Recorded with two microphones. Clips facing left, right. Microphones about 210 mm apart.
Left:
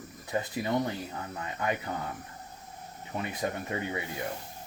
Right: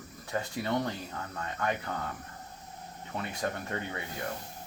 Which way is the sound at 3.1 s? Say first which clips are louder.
Left 2 dB; 15° left (ahead or behind).